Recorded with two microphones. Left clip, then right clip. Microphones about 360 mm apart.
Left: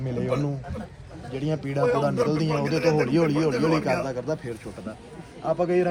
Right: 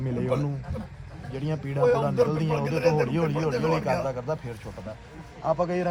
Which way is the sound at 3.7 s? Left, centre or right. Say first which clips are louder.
Left 2 dB; right.